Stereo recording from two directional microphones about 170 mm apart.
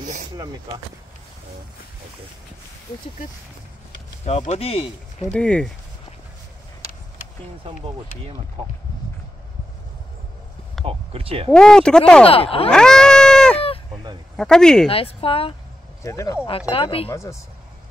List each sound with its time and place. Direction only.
0.0 s a sound: 45° right (ahead or behind)
4.5 s speech: 35° left (ahead or behind)
5.3 s speech: 5° left (ahead or behind)
10.9 s speech: 35° right (ahead or behind)
11.5 s speech: 5° left (ahead or behind)
12.3 s speech: 35° left (ahead or behind)
12.6 s a sound: 5° left (ahead or behind)
14.3 s speech: 5° left (ahead or behind)
14.9 s speech: 35° left (ahead or behind)
16.0 s speech: 15° left (ahead or behind)
16.4 s speech: 35° left (ahead or behind)
17.1 s speech: 15° left (ahead or behind)